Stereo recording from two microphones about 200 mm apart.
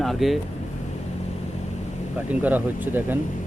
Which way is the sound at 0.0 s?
Centre (ahead or behind).